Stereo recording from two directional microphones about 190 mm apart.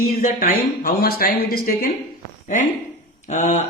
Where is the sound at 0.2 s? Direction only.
45° left (ahead or behind).